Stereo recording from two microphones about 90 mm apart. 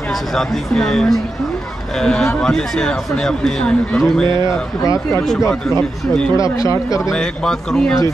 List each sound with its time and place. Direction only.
0.4 s speech: 5° left (ahead or behind)
4.8 s speech: 35° left (ahead or behind)
5.7 s speech: 5° left (ahead or behind)
6.3 s speech: 35° left (ahead or behind)
7.1 s speech: 5° left (ahead or behind)